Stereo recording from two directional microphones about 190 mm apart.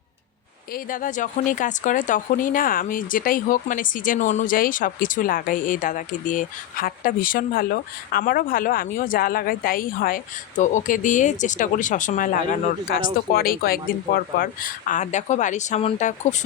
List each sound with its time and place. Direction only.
0.7 s speech: 45° left (ahead or behind)